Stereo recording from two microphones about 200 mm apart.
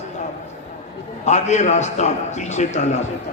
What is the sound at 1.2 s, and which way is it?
A man's voice, 35° left (ahead or behind).